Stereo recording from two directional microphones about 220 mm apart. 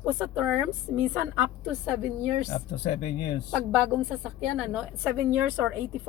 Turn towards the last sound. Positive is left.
turn(degrees=-10)  # may be behind; listen again after turning